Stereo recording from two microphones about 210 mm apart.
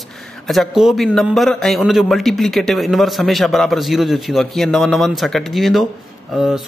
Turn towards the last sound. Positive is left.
turn(degrees=0)  # may be behind; listen again after turning